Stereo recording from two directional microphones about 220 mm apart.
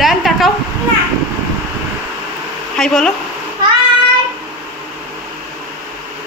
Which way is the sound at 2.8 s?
5° left (ahead or behind).